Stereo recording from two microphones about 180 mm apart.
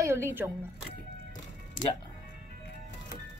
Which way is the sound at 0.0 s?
15° right (ahead or behind).